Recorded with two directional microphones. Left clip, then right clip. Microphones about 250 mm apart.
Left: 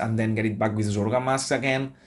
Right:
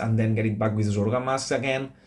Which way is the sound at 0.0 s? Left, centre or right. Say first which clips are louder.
Left 1 dB; centre.